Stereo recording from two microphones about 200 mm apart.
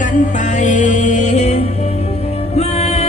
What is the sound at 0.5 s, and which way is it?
Music, 35° left (ahead or behind).